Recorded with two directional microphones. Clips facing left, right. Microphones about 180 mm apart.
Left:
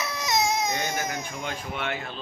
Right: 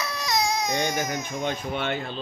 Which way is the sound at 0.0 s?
20° left (ahead or behind).